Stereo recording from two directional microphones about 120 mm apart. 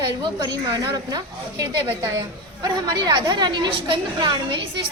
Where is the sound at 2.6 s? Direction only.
40° right (ahead or behind).